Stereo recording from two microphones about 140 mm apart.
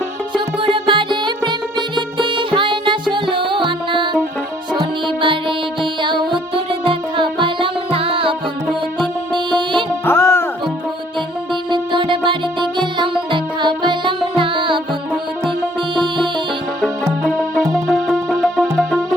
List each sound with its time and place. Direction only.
0.3 s music: 35° right (ahead or behind)
10.1 s music: 15° left (ahead or behind)
11.7 s music: 35° right (ahead or behind)
16.0 s music: 35° right (ahead or behind)
17.7 s music: centre (ahead or behind)